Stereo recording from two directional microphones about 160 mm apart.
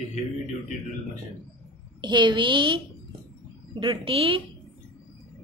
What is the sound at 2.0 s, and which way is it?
Speech, 30° right (ahead or behind).